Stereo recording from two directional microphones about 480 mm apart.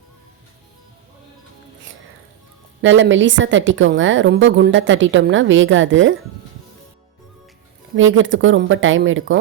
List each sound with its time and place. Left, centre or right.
2.8 s a woman's voice: right
7.9 s a woman's voice: right